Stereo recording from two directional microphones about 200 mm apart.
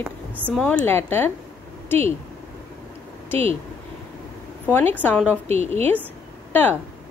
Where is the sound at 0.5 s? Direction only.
5° left (ahead or behind).